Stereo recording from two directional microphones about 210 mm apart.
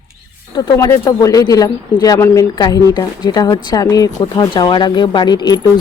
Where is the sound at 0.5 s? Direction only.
20° left (ahead or behind).